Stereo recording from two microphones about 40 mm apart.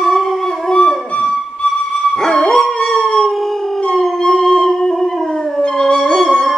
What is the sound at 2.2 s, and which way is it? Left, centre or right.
Dog, centre.